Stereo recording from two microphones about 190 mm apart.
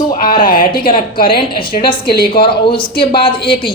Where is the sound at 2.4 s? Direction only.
25° left (ahead or behind).